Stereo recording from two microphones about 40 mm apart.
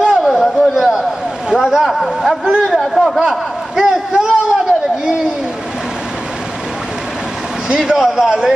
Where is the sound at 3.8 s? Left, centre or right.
Centre.